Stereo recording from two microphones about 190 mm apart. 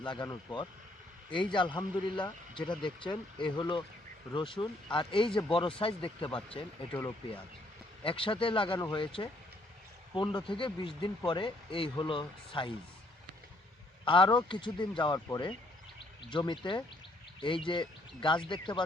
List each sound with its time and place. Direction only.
0.0 s speech: 25° left (ahead or behind)
8.0 s speech: 25° left (ahead or behind)
14.0 s speech: 25° left (ahead or behind)